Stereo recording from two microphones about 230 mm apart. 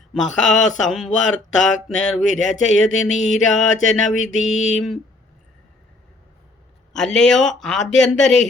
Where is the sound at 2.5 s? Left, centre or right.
Left.